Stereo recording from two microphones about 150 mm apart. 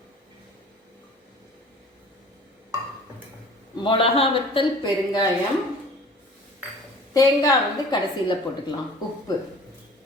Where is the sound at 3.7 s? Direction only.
35° left (ahead or behind).